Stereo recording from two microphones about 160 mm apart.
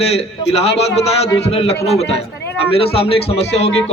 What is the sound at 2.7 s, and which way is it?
Speech, 35° left (ahead or behind).